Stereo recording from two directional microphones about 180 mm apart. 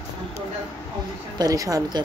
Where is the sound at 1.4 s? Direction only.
20° right (ahead or behind).